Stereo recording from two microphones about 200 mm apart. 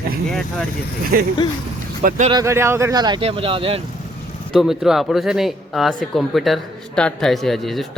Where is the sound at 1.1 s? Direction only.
50° right (ahead or behind).